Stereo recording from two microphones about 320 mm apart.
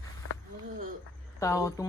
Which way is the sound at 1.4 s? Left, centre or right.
Centre.